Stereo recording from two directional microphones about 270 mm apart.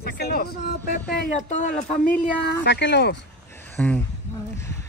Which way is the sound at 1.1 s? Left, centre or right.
Left.